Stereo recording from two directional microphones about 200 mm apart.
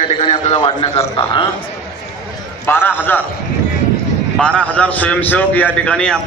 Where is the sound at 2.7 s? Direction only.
10° left (ahead or behind).